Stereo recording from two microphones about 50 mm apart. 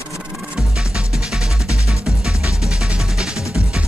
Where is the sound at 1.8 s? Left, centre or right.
Centre.